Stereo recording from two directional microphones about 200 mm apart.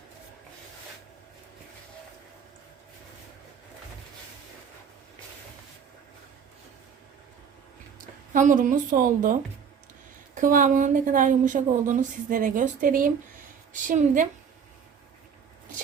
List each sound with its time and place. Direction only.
8.3 s a woman's voice: 40° right (ahead or behind)